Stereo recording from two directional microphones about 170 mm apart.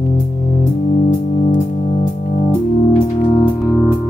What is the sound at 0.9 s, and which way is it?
Music, 60° left (ahead or behind).